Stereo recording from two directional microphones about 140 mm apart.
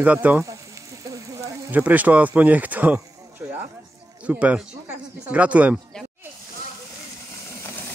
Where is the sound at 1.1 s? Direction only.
20° right (ahead or behind).